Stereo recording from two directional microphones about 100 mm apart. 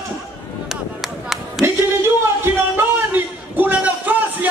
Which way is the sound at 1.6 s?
25° right (ahead or behind).